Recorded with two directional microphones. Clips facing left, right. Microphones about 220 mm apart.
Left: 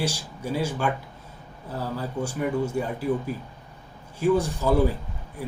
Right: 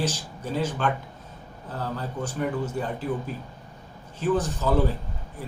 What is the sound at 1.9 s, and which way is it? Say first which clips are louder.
Speech: left 2 dB; 10° left (ahead or behind).